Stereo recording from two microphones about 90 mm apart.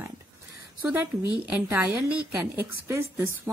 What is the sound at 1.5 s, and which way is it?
A woman's voice, 25° right (ahead or behind).